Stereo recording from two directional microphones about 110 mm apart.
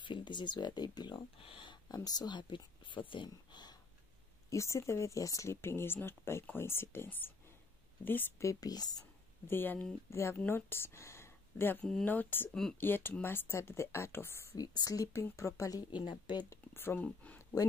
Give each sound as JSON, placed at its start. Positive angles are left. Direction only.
{"t": 0.0, "sound": "speech", "side_deg": 45}
{"t": 4.5, "sound": "speech", "side_deg": 25}
{"t": 8.5, "sound": "speech", "side_deg": 35}
{"t": 9.5, "sound": "speech", "side_deg": 20}
{"t": 15.9, "sound": "speech", "side_deg": 40}
{"t": 16.4, "sound": "speech", "side_deg": 20}